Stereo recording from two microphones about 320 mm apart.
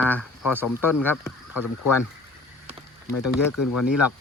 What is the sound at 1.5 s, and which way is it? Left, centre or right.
Speech, left.